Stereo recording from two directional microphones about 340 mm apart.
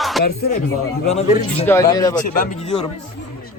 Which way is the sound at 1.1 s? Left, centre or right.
Centre.